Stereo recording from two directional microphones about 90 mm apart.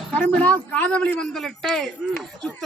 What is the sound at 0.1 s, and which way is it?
A man's voice, 15° left (ahead or behind).